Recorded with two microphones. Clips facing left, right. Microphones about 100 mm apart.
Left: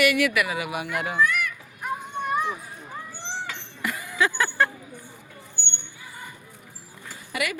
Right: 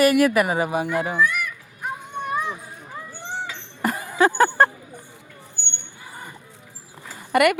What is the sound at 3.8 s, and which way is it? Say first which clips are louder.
Music: right 6 dB; 40° right (ahead or behind).